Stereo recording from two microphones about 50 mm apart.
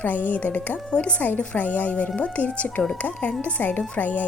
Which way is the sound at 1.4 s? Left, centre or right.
Left.